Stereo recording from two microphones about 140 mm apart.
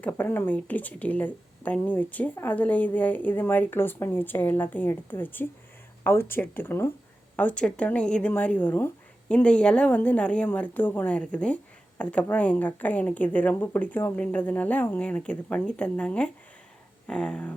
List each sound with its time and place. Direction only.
0.0 s a woman's voice: 10° left (ahead or behind)